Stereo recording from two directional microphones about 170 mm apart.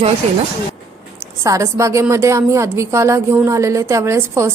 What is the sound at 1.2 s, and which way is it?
A woman's voice, 20° right (ahead or behind).